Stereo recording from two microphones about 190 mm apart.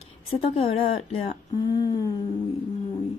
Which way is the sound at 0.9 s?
35° left (ahead or behind).